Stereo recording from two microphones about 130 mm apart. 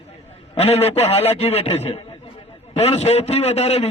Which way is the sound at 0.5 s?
50° left (ahead or behind).